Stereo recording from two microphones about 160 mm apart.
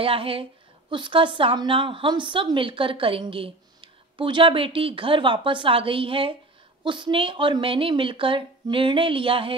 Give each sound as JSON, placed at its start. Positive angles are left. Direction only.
{"t": 0.0, "sound": "a woman's voice", "side_deg": -35}